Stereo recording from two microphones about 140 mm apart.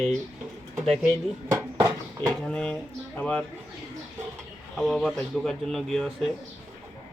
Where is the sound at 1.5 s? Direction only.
20° right (ahead or behind).